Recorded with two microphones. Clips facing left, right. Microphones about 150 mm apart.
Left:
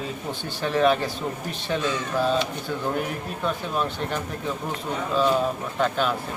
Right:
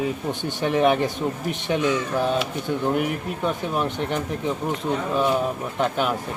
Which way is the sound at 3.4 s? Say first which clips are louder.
Right 2 dB; 15° right (ahead or behind).